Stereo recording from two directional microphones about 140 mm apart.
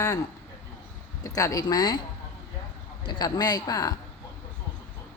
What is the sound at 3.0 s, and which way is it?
Speech, 30° left (ahead or behind).